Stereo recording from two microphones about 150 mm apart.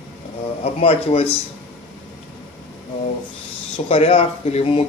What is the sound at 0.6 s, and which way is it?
Speech, 40° left (ahead or behind).